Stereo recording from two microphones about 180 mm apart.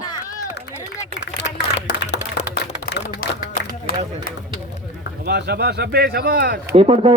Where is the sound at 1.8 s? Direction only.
70° left (ahead or behind).